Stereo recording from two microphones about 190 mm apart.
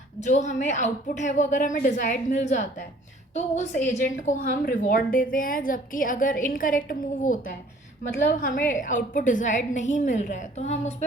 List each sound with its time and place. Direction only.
0.2 s a woman's voice: 40° left (ahead or behind)